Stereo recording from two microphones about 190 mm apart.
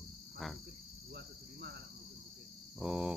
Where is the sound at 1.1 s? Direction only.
60° right (ahead or behind).